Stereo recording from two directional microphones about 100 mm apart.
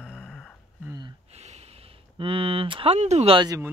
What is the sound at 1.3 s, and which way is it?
Speech, 90° right.